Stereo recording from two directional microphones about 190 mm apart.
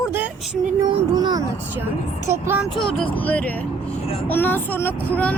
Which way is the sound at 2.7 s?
5° left (ahead or behind).